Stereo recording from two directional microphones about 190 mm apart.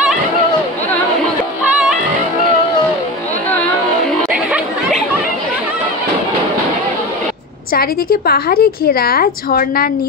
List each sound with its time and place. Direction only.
7.7 s a woman's voice: 50° left (ahead or behind)